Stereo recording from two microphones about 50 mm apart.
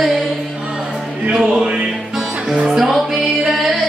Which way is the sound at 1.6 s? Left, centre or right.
Right.